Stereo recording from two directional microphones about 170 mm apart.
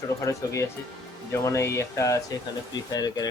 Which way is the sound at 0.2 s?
15° left (ahead or behind).